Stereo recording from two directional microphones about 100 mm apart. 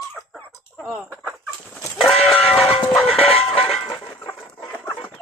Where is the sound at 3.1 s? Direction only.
70° left (ahead or behind).